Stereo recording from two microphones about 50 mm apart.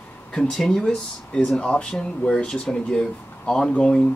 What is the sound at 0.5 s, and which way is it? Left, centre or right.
Speech, centre.